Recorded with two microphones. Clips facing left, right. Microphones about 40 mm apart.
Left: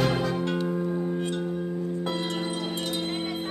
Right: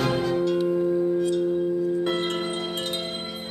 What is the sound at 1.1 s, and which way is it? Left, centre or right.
Singing bowl, left.